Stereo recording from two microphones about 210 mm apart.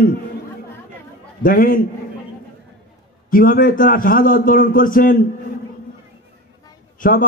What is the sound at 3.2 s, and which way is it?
A man's voice, 40° left (ahead or behind).